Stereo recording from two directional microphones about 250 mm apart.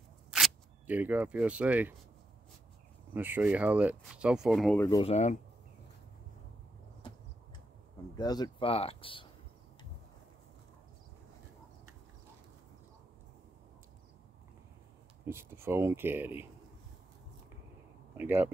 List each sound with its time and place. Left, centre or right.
0.3 s speech: centre
3.1 s speech: centre
4.7 s speech: centre
5.0 s speech: left
8.2 s speech: centre
15.2 s speech: centre
18.1 s speech: centre